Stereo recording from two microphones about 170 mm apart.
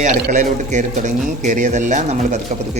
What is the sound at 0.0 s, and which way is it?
Speech, 45° right (ahead or behind).